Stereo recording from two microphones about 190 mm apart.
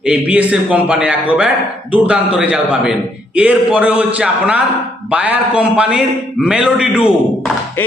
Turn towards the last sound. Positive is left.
turn(degrees=-5)  # may be behind; listen again after turning